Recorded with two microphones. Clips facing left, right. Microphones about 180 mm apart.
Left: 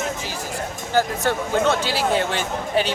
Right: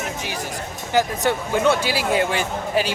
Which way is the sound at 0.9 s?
15° right (ahead or behind).